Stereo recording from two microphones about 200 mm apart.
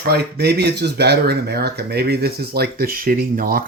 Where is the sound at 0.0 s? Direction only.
55° right (ahead or behind).